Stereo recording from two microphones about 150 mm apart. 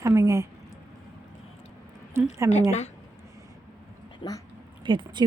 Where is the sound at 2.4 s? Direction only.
15° right (ahead or behind).